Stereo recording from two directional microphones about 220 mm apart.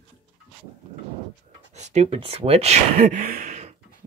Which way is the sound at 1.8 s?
30° right (ahead or behind).